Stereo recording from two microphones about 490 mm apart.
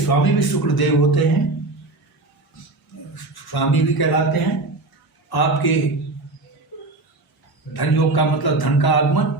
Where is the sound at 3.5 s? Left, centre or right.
Left.